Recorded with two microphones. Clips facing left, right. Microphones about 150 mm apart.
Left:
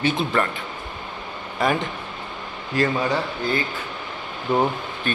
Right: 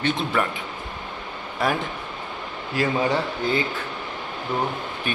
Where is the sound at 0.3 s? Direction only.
10° right (ahead or behind).